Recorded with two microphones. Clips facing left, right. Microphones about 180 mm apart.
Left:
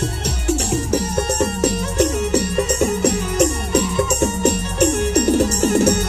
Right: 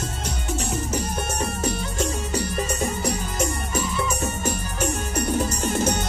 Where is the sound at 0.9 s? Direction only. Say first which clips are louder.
Left 8 dB; 70° left (ahead or behind).